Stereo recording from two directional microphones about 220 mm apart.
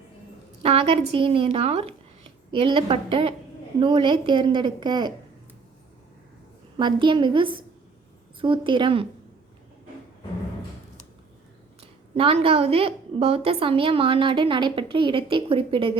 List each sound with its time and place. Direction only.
0.6 s a woman's voice: 25° right (ahead or behind)
6.7 s a woman's voice: 20° right (ahead or behind)
11.8 s a woman's voice: 25° right (ahead or behind)